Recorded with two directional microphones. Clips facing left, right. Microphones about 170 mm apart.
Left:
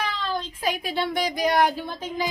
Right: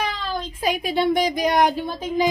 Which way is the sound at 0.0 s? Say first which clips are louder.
Right 2 dB; 15° right (ahead or behind).